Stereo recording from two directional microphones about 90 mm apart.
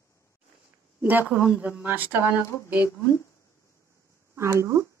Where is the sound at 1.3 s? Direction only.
10° right (ahead or behind).